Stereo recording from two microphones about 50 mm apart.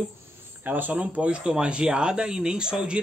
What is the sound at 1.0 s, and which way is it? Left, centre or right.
Speech, right.